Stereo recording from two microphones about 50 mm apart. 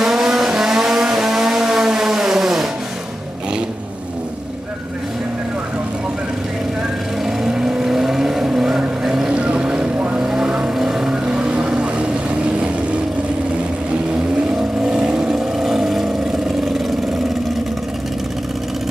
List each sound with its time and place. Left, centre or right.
0.0 s vehicle: centre
7.2 s vehicle: centre
9.3 s boat: right
10.2 s vehicle: centre
14.8 s vehicle: centre